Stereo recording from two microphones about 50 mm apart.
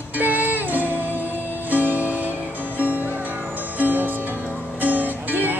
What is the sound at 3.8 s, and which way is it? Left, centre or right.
Music, right.